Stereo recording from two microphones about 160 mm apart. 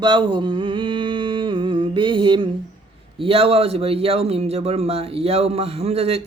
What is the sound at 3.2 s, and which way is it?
Speech, 35° right (ahead or behind).